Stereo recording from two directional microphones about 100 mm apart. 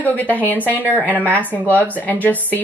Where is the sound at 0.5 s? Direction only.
20° right (ahead or behind).